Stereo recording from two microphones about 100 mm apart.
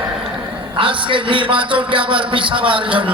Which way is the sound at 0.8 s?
60° right (ahead or behind).